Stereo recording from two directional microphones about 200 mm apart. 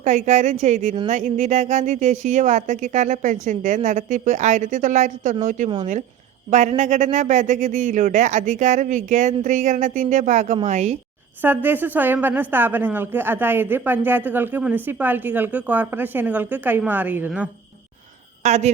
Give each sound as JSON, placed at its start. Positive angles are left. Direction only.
{"t": 0.0, "sound": "speech", "side_deg": -40}
{"t": 11.4, "sound": "a woman's voice", "side_deg": -10}
{"t": 18.4, "sound": "speech", "side_deg": -35}